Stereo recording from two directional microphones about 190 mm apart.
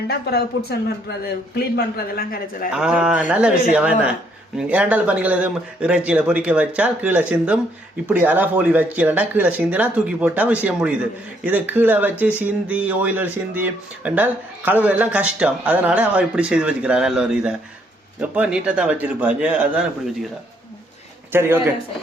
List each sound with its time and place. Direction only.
0.1 s speech: 55° left (ahead or behind)
2.7 s speech: 5° right (ahead or behind)
21.3 s speech: 10° right (ahead or behind)